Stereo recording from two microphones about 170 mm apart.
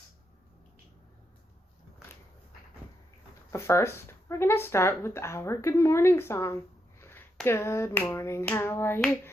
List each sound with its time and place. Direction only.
3.5 s speech: 15° left (ahead or behind)
7.0 s a sound: 15° left (ahead or behind)
7.4 s speech: 15° left (ahead or behind)